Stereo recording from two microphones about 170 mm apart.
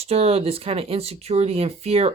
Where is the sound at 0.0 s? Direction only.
35° right (ahead or behind).